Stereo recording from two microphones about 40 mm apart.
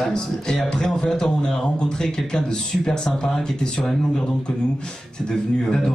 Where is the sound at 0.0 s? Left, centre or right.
Centre.